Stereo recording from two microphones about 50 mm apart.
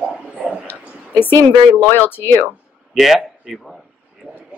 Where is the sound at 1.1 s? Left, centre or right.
Left.